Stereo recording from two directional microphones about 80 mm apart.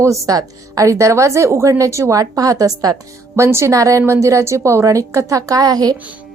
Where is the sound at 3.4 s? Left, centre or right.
Right.